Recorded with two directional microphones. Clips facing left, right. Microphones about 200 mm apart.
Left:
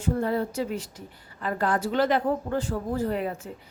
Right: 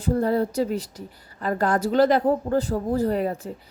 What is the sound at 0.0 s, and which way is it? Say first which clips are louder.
A woman's voice: right 4 dB; 35° right (ahead or behind).